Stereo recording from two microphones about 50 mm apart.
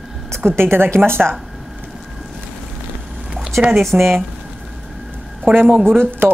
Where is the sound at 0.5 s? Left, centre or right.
Right.